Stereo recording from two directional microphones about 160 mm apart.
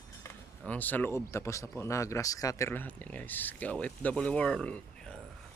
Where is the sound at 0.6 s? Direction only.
10° left (ahead or behind).